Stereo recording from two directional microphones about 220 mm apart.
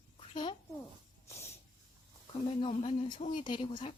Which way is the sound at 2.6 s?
25° left (ahead or behind).